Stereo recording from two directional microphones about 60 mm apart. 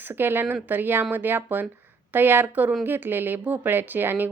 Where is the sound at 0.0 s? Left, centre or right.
Right.